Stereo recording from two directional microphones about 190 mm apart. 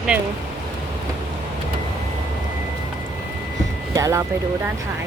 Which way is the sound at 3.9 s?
15° right (ahead or behind).